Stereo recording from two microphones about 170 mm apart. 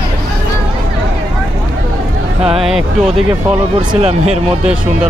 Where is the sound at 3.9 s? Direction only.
40° right (ahead or behind).